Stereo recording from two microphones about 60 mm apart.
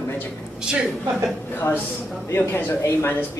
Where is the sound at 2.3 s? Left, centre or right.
Left.